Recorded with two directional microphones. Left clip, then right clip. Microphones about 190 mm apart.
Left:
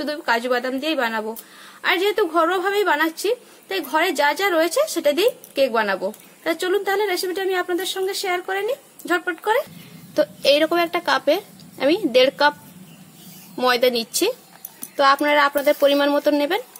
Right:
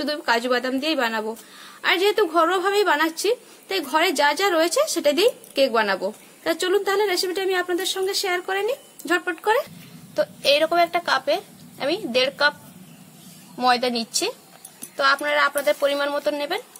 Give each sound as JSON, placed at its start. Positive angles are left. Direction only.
{"t": 0.0, "sound": "a woman's voice", "side_deg": -5}
{"t": 10.1, "sound": "a woman's voice", "side_deg": 40}
{"t": 13.6, "sound": "speech", "side_deg": 50}